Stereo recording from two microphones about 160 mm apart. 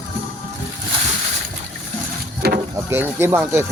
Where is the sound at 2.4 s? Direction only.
80° right.